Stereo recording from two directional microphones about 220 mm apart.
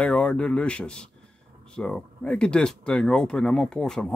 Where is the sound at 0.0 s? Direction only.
5° left (ahead or behind).